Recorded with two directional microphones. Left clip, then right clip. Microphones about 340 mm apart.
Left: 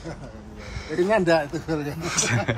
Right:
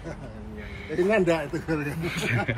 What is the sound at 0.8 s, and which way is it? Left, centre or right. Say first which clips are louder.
Speech: left 2 dB; left.